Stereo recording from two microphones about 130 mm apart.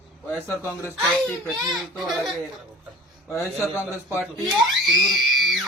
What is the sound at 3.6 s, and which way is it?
Speech, 20° left (ahead or behind).